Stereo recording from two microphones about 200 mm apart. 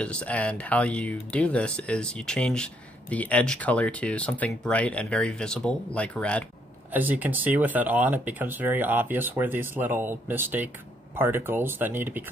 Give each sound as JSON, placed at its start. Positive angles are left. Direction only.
{"t": 0.0, "sound": "speech", "side_deg": 5}
{"t": 6.9, "sound": "speech", "side_deg": -10}